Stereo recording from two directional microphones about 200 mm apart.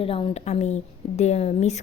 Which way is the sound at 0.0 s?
25° left (ahead or behind).